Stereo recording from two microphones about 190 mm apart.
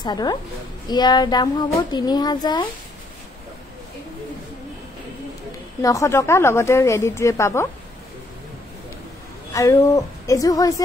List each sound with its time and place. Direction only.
0.0 s a child's voice: 20° left (ahead or behind)
5.8 s a woman's voice: 15° left (ahead or behind)
9.5 s a woman's voice: 15° left (ahead or behind)